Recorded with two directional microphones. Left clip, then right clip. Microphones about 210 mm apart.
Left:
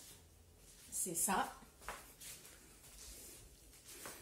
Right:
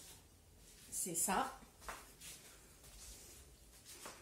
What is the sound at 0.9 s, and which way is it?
Speech, 20° right (ahead or behind).